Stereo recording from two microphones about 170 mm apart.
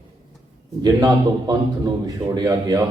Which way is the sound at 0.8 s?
20° right (ahead or behind).